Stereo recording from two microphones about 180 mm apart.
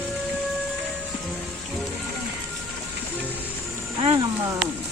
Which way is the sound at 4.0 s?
30° right (ahead or behind).